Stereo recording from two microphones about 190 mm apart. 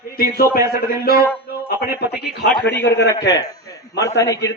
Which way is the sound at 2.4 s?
65° left (ahead or behind).